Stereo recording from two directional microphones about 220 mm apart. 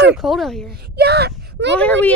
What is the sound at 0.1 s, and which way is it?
Speech, centre (ahead or behind).